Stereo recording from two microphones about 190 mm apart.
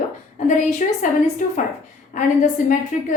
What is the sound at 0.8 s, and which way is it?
Speech, 45° left (ahead or behind).